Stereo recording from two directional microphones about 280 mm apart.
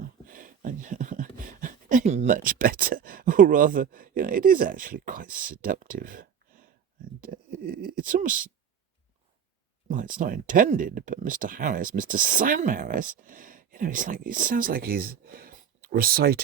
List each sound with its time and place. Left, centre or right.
0.3 s speech: right
9.9 s speech: right